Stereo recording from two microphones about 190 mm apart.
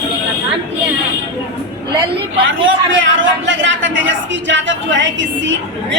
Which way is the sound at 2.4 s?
90° right.